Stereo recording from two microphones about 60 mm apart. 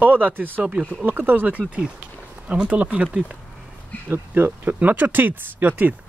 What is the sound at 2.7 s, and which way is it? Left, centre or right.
Speech, right.